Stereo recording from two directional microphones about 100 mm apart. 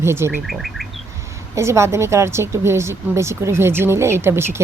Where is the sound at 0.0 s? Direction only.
25° right (ahead or behind).